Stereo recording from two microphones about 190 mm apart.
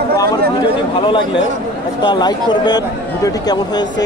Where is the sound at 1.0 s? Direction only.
25° left (ahead or behind).